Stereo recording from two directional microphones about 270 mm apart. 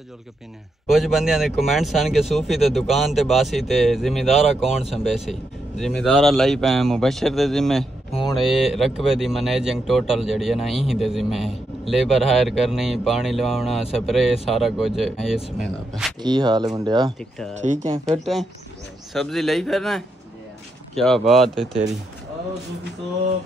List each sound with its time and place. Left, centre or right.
0.8 s speech: centre
16.2 s speech: centre
17.2 s speech: centre